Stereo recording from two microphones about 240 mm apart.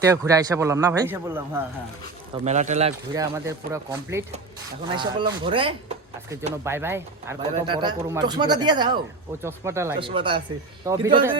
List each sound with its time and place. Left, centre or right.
0.0 s a man's voice: centre
2.4 s speech: right
3.1 s a man's voice: centre
6.7 s a man's voice: centre